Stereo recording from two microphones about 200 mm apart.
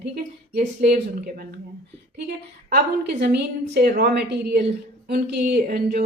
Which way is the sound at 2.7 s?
55° right (ahead or behind).